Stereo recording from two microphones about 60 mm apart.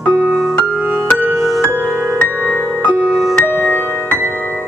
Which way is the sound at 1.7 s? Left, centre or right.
Right.